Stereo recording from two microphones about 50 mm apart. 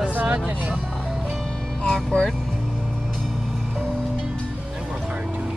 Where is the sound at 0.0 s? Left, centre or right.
Right.